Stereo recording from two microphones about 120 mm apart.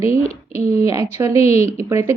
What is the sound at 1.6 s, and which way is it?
Speech, 20° right (ahead or behind).